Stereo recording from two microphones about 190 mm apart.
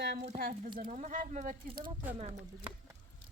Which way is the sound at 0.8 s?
40° right (ahead or behind).